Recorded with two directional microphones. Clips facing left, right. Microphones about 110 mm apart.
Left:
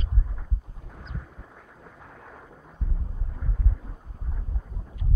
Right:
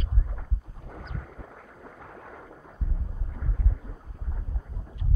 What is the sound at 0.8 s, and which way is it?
Boat, 50° right (ahead or behind).